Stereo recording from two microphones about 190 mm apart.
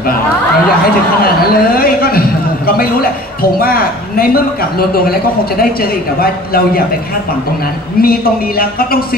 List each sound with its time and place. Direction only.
1.2 s a man's voice: 50° left (ahead or behind)
8.0 s a man's voice: 50° left (ahead or behind)